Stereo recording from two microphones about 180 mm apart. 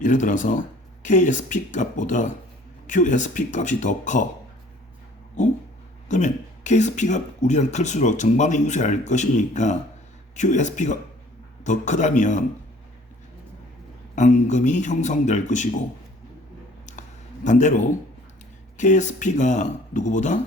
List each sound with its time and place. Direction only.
0.0 s speech: 45° left (ahead or behind)
6.1 s speech: 40° left (ahead or behind)
14.2 s speech: 40° left (ahead or behind)
17.4 s speech: 45° left (ahead or behind)